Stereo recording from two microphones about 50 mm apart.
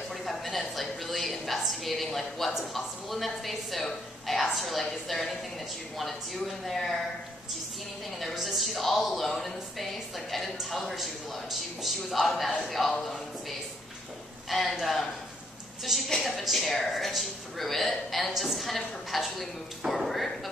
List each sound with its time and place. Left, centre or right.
0.1 s a woman's voice: centre
8.2 s a woman's voice: centre
14.5 s a woman's voice: centre